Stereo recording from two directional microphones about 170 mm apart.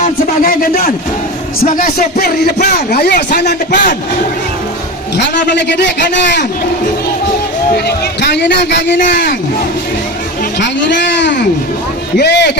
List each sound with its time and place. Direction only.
0.0 s speech: 55° left (ahead or behind); by 3.2 s 70° left (ahead or behind)
3.3 s a man's voice: 85° left
5.1 s a man's voice: 85° left
7.9 s speech: 75° left (ahead or behind)
9.0 s speech: 50° left (ahead or behind)
10.6 s a man's voice: 90° left